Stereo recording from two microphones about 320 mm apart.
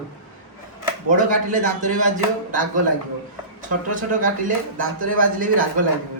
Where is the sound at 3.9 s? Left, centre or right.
Right.